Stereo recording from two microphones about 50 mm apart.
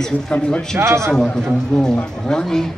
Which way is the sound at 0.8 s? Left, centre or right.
Right.